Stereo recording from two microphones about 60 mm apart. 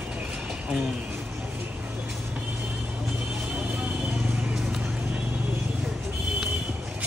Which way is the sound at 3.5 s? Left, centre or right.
Right.